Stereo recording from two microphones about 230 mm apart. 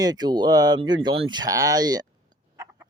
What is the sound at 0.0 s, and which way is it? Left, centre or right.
Speech, centre.